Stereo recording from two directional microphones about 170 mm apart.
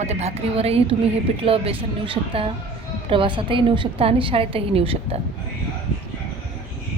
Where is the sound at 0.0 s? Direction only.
40° right (ahead or behind).